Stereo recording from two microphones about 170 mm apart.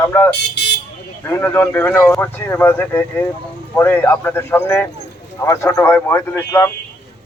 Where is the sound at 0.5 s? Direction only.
80° left.